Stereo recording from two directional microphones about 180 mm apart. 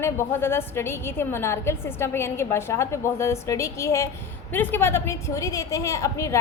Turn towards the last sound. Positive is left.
turn(degrees=15)  # may be behind; listen again after turning